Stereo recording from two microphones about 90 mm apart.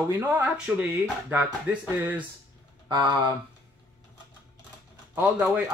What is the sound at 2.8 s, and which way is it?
Speech, 55° right (ahead or behind).